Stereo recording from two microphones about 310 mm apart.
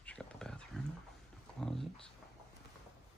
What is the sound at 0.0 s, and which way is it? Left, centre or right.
Wild animals, centre.